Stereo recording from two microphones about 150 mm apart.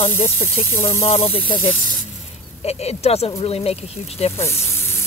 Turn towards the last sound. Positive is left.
turn(degrees=15)  # may be behind; listen again after turning